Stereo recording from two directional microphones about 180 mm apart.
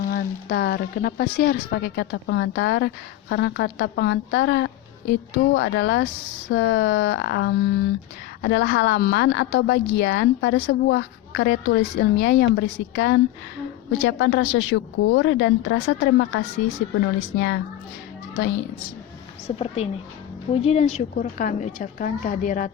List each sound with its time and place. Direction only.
0.0 s a woman's voice: 55° left (ahead or behind)
12.5 s a woman's voice: 90° left
17.2 s a woman's voice: 75° left (ahead or behind)
19.5 s a woman's voice: 35° left (ahead or behind)